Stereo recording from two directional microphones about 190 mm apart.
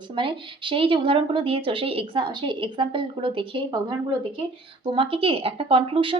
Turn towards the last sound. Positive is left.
turn(degrees=-30)  # may be behind; listen again after turning